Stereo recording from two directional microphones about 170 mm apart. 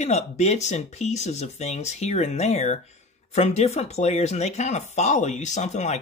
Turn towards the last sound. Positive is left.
turn(degrees=40)  # may be behind; listen again after turning